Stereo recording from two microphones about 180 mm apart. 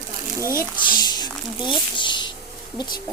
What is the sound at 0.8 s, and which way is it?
A woman's voice, 25° left (ahead or behind).